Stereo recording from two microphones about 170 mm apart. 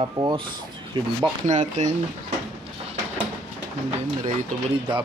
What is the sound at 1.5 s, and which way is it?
Speech, 45° right (ahead or behind).